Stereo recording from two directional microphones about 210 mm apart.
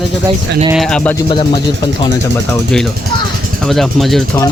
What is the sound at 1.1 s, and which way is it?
Speech, 20° left (ahead or behind).